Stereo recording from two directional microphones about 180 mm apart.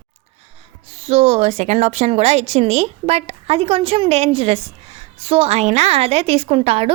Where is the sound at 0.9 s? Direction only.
35° right (ahead or behind).